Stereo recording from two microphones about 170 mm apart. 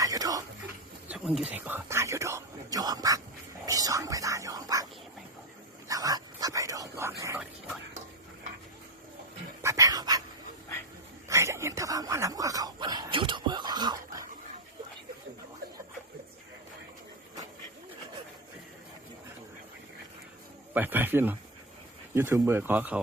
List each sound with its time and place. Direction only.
0.0 s a sound: 20° right (ahead or behind)
1.1 s speech: 5° right (ahead or behind); by 4.9 s 20° right (ahead or behind)
5.9 s whispering: 20° right (ahead or behind)
9.6 s dog: 20° right (ahead or behind)
11.3 s a sound: 15° right (ahead or behind)
20.7 s speech: 10° right (ahead or behind)